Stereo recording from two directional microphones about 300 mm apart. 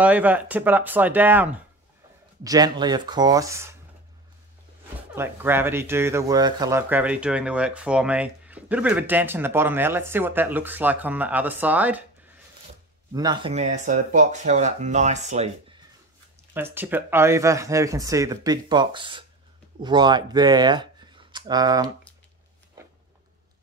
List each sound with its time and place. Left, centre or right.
0.0 s speech: centre
5.1 s speech: centre
13.1 s speech: centre
16.7 s speech: centre